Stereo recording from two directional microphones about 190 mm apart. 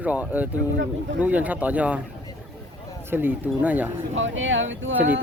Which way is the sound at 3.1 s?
10° right (ahead or behind).